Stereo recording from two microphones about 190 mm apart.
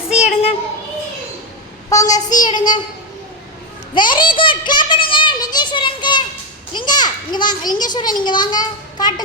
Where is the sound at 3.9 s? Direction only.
25° left (ahead or behind).